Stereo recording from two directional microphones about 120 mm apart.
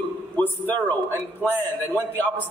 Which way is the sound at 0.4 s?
15° left (ahead or behind).